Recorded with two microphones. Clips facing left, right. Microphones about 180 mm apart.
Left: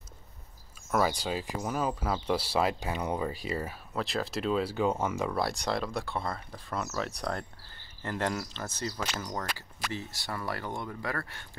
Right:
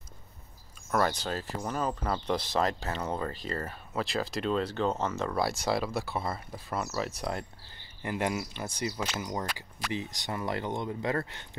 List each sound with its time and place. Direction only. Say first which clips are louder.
0.9 s speech: even; 5° left (ahead or behind)
5.4 s speech: right 2 dB; centre (ahead or behind)
8.0 s speech: right 1 dB; 15° right (ahead or behind)